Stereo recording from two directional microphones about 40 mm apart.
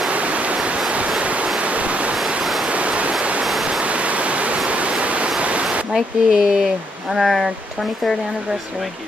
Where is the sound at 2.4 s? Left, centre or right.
Centre.